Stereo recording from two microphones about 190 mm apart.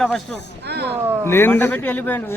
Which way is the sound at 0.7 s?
60° right (ahead or behind).